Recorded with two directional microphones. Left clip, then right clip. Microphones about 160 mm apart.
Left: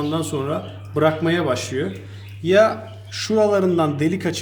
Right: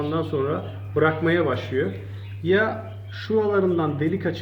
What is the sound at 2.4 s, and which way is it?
A man's voice, 90° left.